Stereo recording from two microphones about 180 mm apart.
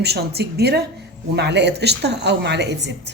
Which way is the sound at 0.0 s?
65° right (ahead or behind).